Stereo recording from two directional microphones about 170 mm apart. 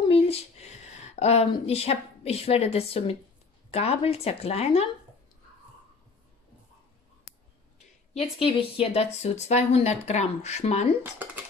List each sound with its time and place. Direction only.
0.1 s speech: 35° left (ahead or behind)
8.4 s speech: 35° left (ahead or behind)
11.2 s beatboxing: 10° right (ahead or behind)